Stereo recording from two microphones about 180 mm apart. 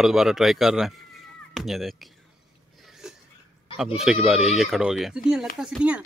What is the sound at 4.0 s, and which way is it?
A man's voice, centre (ahead or behind).